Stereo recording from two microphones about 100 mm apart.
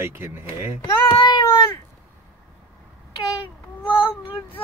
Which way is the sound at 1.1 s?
50° left (ahead or behind).